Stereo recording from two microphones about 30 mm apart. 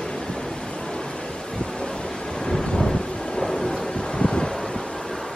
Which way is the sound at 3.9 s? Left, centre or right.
Left.